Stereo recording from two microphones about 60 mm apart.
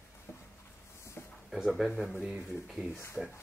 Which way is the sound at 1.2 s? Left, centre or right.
Left.